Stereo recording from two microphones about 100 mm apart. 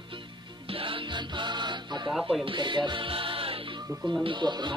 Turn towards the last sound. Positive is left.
turn(degrees=-50)  # may be behind; listen again after turning